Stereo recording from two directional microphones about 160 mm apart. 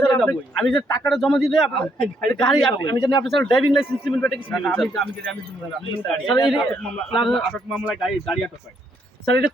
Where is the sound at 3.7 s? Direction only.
Centre (ahead or behind).